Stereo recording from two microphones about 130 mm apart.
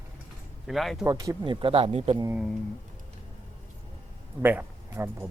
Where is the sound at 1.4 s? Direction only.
40° right (ahead or behind).